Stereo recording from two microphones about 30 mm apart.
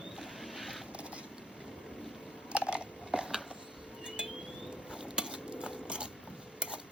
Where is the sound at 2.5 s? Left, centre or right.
Right.